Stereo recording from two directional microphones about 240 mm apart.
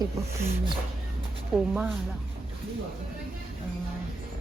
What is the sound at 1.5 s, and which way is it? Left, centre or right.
Speech, centre.